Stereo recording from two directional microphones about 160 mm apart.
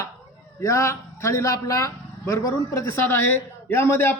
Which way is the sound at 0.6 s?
20° left (ahead or behind).